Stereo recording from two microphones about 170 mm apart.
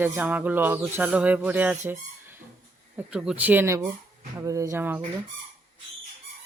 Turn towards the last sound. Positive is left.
turn(degrees=-15)  # may be behind; listen again after turning